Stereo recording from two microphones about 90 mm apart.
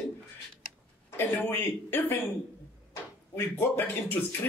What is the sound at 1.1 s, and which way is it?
Speech, 25° left (ahead or behind).